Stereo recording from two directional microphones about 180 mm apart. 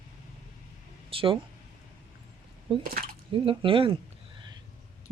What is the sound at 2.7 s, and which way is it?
Speech, 30° right (ahead or behind).